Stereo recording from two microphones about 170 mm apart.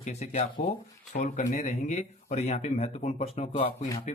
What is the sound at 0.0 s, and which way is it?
Speech, 40° left (ahead or behind).